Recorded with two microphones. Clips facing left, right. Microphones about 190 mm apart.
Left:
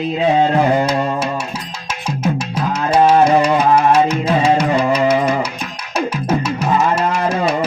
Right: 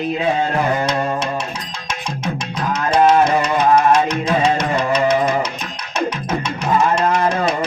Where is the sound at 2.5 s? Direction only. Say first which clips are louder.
Even; 10° left (ahead or behind).